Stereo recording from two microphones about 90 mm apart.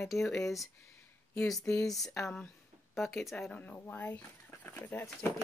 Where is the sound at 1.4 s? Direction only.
5° left (ahead or behind); by 5.1 s 25° left (ahead or behind).